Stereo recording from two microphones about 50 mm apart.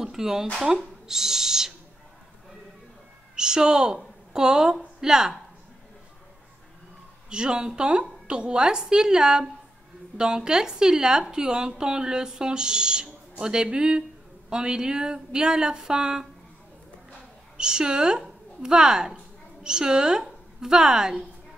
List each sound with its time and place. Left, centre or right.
0.0 s speech: centre
3.3 s a woman's voice: centre
7.2 s a woman's voice: centre
17.6 s a woman's voice: centre